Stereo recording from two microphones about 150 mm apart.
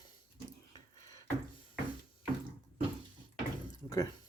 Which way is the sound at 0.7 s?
25° left (ahead or behind).